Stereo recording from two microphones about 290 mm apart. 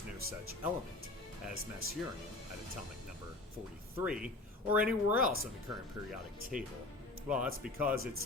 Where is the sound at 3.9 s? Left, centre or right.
Centre.